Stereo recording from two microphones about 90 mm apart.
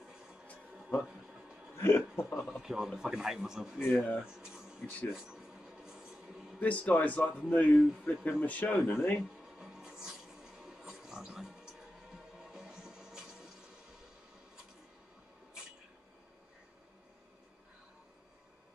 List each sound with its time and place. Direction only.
0.0 s a sound: 5° right (ahead or behind)
1.8 s speech: 25° left (ahead or behind)
2.4 s a man's voice: 5° right (ahead or behind)
3.9 s speech: 15° left (ahead or behind)
4.2 s speech: 5° right (ahead or behind)
5.1 s a sound: 5° right (ahead or behind)
6.6 s speech: 15° left (ahead or behind)
9.2 s music: 5° right (ahead or behind)